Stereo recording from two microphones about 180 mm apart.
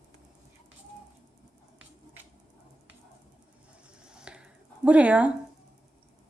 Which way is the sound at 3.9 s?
5° right (ahead or behind).